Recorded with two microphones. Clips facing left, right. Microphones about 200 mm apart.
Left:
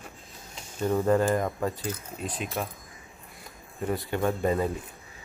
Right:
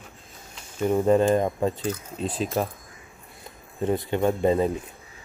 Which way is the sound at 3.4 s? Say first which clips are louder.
Right 5 dB; 20° right (ahead or behind).